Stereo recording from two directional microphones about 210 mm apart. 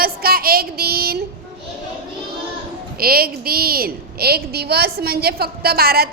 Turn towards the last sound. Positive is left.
turn(degrees=-45)  # may be behind; listen again after turning